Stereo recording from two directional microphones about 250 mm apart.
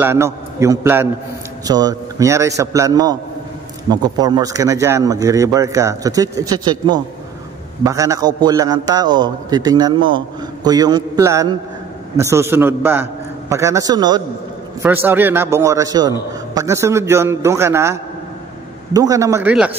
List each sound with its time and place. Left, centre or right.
0.0 s a man's voice: centre
18.9 s a man's voice: centre